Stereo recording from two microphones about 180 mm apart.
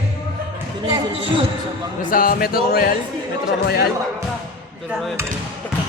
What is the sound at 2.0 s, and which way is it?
Music, 50° left (ahead or behind).